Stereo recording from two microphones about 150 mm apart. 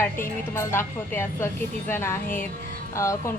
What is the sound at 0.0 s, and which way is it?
A woman's voice, 15° left (ahead or behind).